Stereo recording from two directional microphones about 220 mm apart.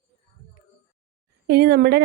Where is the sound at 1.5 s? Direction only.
50° right (ahead or behind).